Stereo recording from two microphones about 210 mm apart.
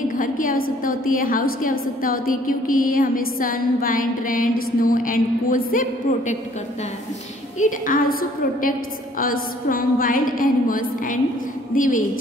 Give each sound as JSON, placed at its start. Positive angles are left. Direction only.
{"t": 0.2, "sound": "a woman's voice", "side_deg": 40}
{"t": 7.5, "sound": "a woman's voice", "side_deg": 40}